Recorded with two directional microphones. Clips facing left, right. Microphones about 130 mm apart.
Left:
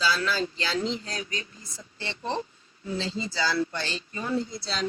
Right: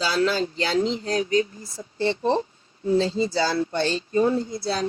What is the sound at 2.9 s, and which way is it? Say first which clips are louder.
Speech: right 9 dB; 40° right (ahead or behind).